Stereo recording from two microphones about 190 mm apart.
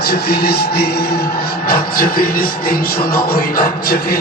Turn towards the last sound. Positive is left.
turn(degrees=50)  # may be behind; listen again after turning